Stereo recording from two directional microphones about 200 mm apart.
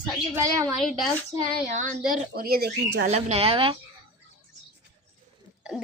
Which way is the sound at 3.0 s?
30° right (ahead or behind).